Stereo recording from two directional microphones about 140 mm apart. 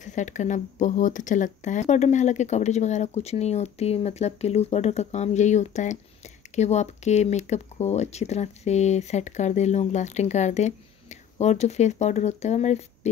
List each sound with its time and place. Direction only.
0.0 s speech: 60° left (ahead or behind)